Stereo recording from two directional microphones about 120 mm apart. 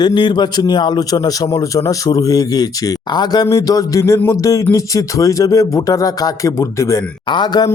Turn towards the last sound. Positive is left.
turn(degrees=35)  # may be behind; listen again after turning